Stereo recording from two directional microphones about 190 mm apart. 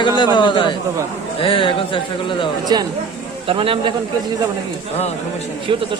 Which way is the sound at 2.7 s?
20° right (ahead or behind).